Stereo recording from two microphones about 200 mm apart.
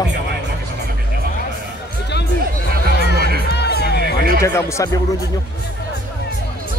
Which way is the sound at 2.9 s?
55° left (ahead or behind).